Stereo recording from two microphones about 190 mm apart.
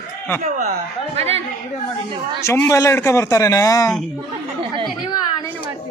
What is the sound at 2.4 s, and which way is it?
A man's voice, 15° left (ahead or behind).